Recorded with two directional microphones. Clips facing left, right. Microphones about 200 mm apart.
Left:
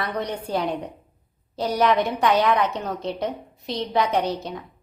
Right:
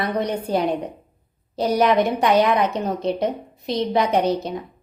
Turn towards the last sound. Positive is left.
turn(degrees=-15)  # may be behind; listen again after turning